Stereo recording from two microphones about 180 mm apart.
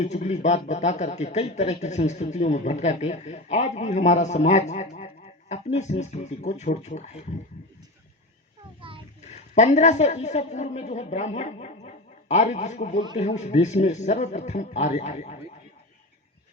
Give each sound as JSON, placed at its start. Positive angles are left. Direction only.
{"t": 0.0, "sound": "a man's voice", "side_deg": 40}
{"t": 9.2, "sound": "a woman's voice", "side_deg": 40}